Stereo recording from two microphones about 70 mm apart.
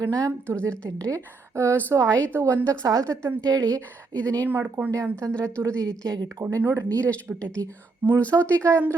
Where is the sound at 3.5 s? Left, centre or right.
Right.